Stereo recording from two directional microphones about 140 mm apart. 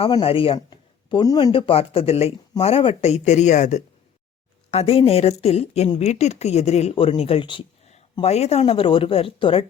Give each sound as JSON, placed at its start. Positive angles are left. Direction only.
{"t": 0.2, "sound": "speech", "side_deg": 40}
{"t": 1.5, "sound": "speech", "side_deg": 40}
{"t": 4.7, "sound": "speech", "side_deg": 45}